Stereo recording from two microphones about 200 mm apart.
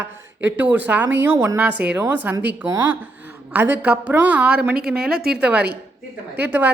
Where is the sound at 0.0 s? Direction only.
10° right (ahead or behind).